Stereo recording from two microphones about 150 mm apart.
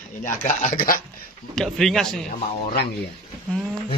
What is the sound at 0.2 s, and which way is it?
Speech, 50° left (ahead or behind).